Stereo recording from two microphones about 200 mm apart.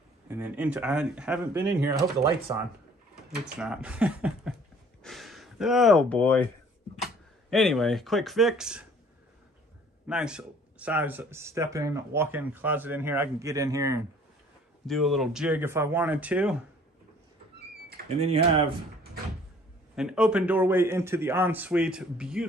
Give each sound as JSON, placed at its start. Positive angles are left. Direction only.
{"t": 0.3, "sound": "speech", "side_deg": -10}
{"t": 3.3, "sound": "speech", "side_deg": -5}
{"t": 10.0, "sound": "speech", "side_deg": -5}
{"t": 14.9, "sound": "speech", "side_deg": 0}
{"t": 18.1, "sound": "speech", "side_deg": -30}
{"t": 20.0, "sound": "speech", "side_deg": -5}